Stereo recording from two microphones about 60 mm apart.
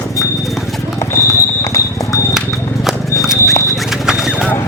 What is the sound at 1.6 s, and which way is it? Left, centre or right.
Clip-clop, left.